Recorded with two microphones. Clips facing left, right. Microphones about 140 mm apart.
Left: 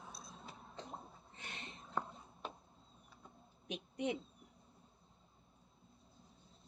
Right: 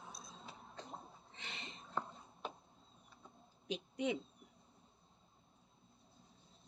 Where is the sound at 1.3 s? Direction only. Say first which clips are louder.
Even; 90° right.